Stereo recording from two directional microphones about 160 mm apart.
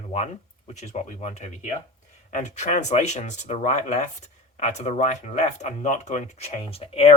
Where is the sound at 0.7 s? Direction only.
45° left (ahead or behind).